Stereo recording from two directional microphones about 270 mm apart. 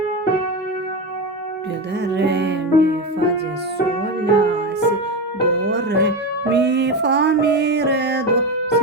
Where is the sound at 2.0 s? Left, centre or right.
Right.